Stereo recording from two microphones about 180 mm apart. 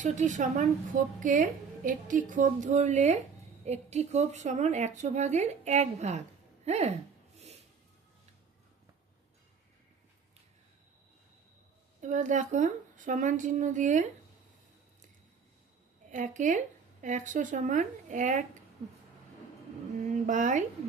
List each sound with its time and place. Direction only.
0.0 s a woman's voice: 40° right (ahead or behind)
12.0 s speech: 45° right (ahead or behind)
16.0 s speech: 45° right (ahead or behind)
20.2 s speech: 45° right (ahead or behind)